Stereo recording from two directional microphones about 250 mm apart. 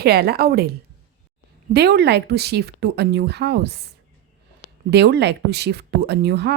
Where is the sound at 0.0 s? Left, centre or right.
Right.